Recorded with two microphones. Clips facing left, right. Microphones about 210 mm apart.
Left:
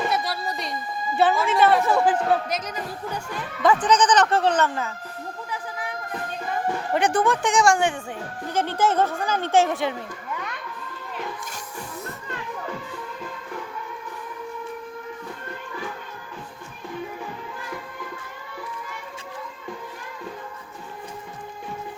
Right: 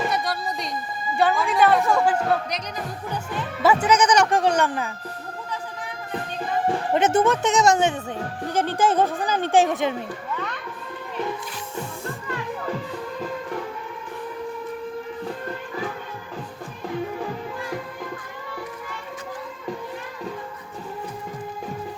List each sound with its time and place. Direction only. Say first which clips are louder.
0.1 s a sound: even; centre (ahead or behind)
1.1 s a woman's voice: left 1 dB; centre (ahead or behind)
3.6 s speech: even; 10° right (ahead or behind)
6.7 s speech: right 2 dB; 25° right (ahead or behind)